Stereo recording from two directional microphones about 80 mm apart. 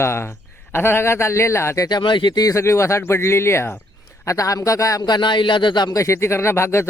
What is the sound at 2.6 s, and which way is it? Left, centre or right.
Speech, left.